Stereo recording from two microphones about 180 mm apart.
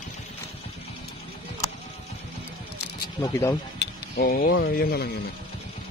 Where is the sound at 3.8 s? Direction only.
60° left (ahead or behind).